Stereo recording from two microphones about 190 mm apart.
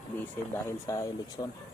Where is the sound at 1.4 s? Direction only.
30° left (ahead or behind).